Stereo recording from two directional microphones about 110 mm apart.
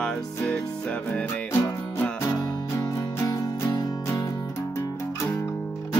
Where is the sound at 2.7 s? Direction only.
30° left (ahead or behind).